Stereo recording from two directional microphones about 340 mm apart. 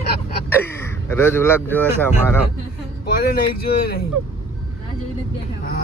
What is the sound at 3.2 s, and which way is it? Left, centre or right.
Speech, left.